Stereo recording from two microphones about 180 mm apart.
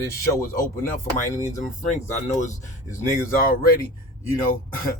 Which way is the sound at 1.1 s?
20° right (ahead or behind).